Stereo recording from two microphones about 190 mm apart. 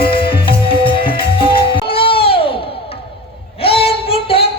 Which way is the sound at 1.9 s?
30° left (ahead or behind).